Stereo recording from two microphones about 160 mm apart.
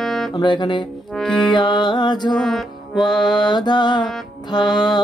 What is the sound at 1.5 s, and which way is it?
Music, 30° left (ahead or behind).